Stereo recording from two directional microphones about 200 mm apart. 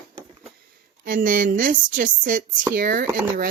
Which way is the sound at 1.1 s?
45° right (ahead or behind).